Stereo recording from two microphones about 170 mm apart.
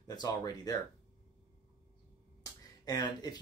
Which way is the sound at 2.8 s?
25° left (ahead or behind).